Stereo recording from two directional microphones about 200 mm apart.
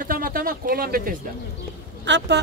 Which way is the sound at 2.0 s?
60° right (ahead or behind).